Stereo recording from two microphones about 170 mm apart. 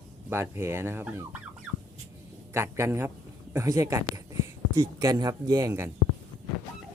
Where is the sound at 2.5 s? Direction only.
15° right (ahead or behind).